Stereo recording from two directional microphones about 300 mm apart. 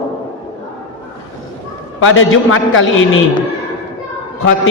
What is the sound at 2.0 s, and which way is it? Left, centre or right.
A man's voice, left.